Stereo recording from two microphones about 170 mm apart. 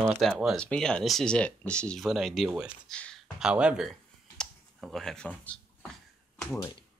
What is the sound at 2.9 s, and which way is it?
Speech, 5° left (ahead or behind).